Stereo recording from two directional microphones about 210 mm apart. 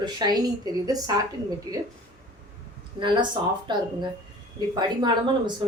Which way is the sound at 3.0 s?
20° right (ahead or behind).